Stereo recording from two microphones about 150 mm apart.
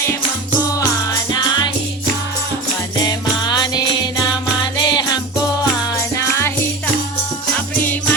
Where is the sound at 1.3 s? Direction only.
30° left (ahead or behind).